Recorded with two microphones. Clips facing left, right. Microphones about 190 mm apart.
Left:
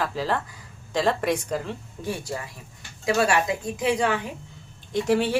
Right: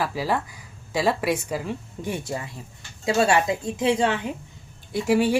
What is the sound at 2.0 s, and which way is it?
Speech, 20° right (ahead or behind).